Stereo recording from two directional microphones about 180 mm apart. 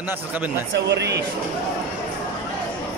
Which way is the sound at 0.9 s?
70° right (ahead or behind).